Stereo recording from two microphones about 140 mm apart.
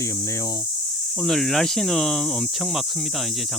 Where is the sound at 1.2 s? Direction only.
5° left (ahead or behind).